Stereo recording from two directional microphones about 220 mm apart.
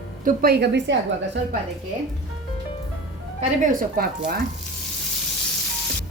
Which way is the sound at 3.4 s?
35° right (ahead or behind).